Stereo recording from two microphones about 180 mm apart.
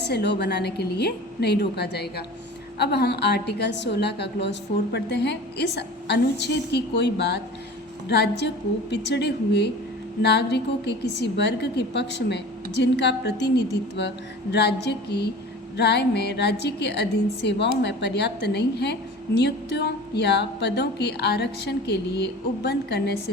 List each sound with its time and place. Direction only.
0.0 s a woman's voice: 70° left (ahead or behind)